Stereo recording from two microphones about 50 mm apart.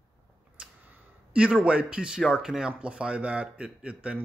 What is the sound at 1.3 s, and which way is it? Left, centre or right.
Speech, right.